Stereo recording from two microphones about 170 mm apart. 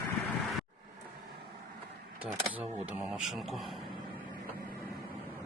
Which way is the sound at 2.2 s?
10° right (ahead or behind).